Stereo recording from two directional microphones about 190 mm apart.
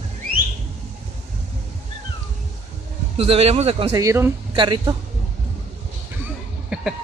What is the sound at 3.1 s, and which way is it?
Speech, 30° right (ahead or behind).